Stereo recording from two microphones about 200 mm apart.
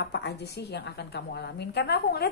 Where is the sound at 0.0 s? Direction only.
55° left (ahead or behind).